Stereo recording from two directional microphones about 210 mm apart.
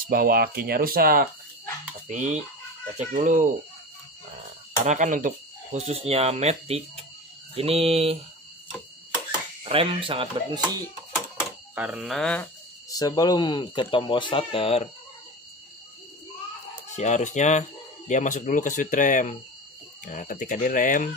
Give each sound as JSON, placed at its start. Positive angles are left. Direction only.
{"t": 0.1, "sound": "speech", "side_deg": -45}
{"t": 4.8, "sound": "speech", "side_deg": -35}
{"t": 9.6, "sound": "speech", "side_deg": -25}
{"t": 11.7, "sound": "speech", "side_deg": -5}
{"t": 12.9, "sound": "speech", "side_deg": 20}
{"t": 16.9, "sound": "speech", "side_deg": 35}